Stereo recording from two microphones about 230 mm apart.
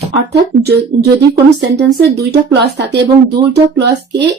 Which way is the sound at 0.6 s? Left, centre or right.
Right.